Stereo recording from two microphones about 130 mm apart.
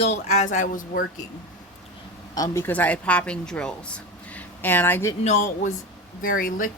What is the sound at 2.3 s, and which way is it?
Speech, 30° left (ahead or behind).